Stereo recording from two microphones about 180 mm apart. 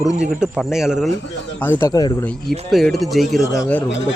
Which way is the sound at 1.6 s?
10° left (ahead or behind).